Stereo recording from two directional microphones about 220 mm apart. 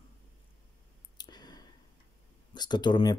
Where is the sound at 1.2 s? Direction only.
20° left (ahead or behind).